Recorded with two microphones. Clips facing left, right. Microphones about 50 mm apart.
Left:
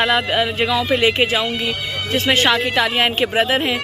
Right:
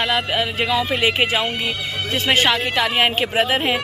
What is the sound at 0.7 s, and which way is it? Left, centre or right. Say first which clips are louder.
Speech: left 1 dB; centre.